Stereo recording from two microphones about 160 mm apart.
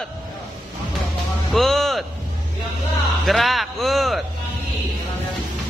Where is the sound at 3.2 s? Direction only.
Centre (ahead or behind).